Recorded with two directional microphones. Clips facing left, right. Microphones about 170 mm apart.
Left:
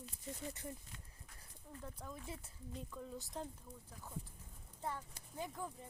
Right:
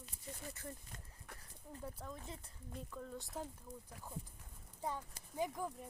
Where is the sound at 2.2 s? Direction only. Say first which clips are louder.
Left 2 dB; 10° left (ahead or behind).